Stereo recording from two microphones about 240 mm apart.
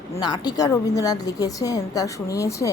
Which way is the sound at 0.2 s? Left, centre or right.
Centre.